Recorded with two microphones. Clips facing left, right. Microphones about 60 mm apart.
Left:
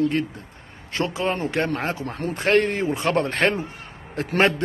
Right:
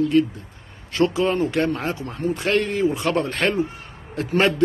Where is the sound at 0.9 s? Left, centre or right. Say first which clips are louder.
Right 5 dB; left.